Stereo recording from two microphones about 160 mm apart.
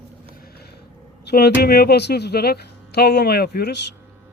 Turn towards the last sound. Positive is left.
turn(degrees=85)